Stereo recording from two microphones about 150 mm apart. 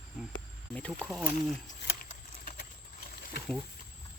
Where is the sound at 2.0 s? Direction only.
65° left (ahead or behind).